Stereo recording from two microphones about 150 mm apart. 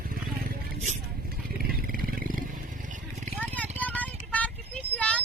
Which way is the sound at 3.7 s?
10° left (ahead or behind).